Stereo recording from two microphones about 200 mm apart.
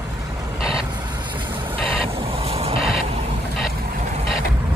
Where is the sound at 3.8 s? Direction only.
35° right (ahead or behind).